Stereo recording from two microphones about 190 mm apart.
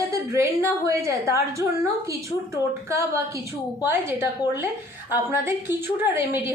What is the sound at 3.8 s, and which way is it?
A woman's voice, 10° right (ahead or behind).